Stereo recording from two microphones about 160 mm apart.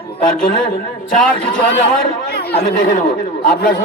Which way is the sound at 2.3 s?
80° left.